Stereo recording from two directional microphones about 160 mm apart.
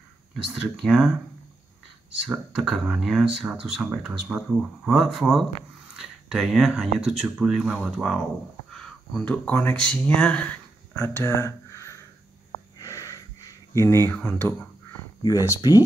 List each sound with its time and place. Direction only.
0.5 s speech: centre (ahead or behind)
2.2 s speech: centre (ahead or behind); by 12.0 s 20° left (ahead or behind)
12.7 s a sound: 20° left (ahead or behind)
13.7 s speech: 20° left (ahead or behind)
15.2 s speech: 20° left (ahead or behind)